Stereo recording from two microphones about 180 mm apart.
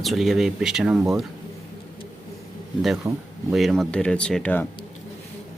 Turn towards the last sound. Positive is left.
turn(degrees=10)  # may be behind; listen again after turning